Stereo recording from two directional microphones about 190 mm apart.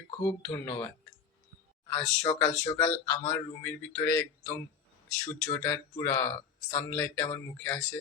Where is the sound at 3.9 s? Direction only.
20° left (ahead or behind).